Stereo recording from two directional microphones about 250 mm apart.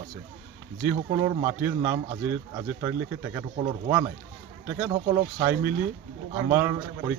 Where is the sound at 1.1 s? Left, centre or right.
Centre.